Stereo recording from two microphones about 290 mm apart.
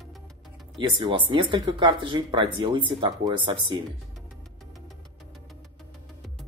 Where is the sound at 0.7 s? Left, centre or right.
Centre.